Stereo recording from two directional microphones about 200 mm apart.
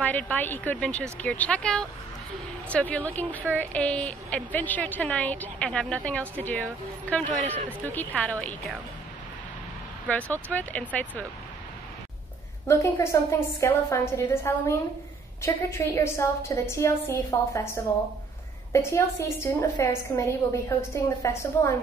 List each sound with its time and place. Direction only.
0.0 s a woman's voice: 10° left (ahead or behind)
10.0 s a woman's voice: 5° left (ahead or behind)
12.6 s a woman's voice: 15° left (ahead or behind)
18.7 s a woman's voice: 15° left (ahead or behind)